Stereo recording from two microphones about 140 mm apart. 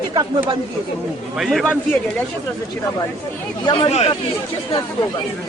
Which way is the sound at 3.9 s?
45° left (ahead or behind).